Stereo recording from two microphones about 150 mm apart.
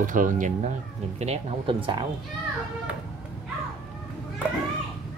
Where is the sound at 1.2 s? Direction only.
45° right (ahead or behind).